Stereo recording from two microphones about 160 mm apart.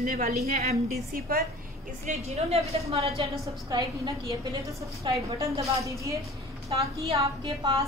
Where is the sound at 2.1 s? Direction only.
40° right (ahead or behind).